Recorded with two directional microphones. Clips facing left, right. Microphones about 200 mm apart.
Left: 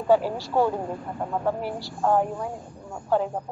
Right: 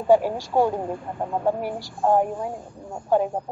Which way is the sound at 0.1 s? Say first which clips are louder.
Right 3 dB; 15° right (ahead or behind).